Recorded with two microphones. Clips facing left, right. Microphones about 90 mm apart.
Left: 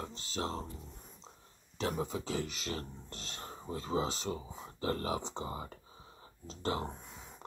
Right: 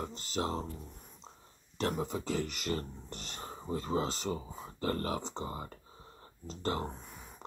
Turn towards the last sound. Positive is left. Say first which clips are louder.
# right 1 dB
turn(degrees=-5)  # may be behind; listen again after turning